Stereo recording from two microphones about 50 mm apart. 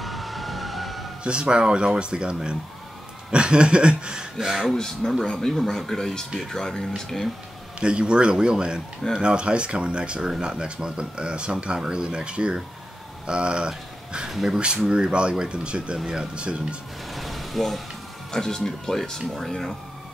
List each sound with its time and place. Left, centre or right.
0.0 s emergency vehicle: centre
1.2 s speech: centre
4.6 s speech: centre
7.8 s speech: centre
14.9 s speech: centre
17.1 s a sound: centre
18.3 s speech: centre